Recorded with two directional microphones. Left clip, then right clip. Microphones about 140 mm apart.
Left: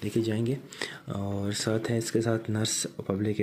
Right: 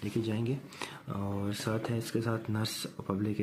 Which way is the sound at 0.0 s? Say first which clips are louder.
Left 5 dB; 25° left (ahead or behind).